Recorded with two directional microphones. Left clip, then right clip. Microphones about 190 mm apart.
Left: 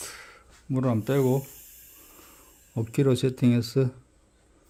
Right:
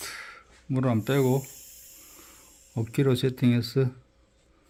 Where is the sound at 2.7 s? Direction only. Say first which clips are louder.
Left 1 dB; 15° left (ahead or behind).